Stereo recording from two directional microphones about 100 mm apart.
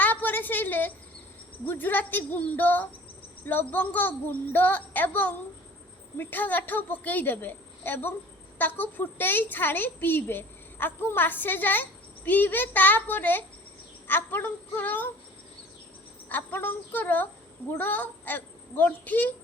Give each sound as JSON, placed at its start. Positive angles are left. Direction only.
{"t": 0.0, "sound": "a sound", "side_deg": 15}
{"t": 1.6, "sound": "a woman's voice", "side_deg": 20}
{"t": 16.3, "sound": "a woman's voice", "side_deg": 20}